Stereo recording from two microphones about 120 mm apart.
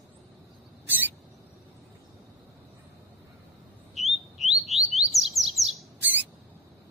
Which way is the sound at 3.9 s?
Centre (ahead or behind).